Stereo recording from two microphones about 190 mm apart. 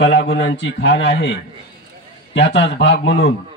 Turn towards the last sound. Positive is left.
turn(degrees=65)  # may be behind; listen again after turning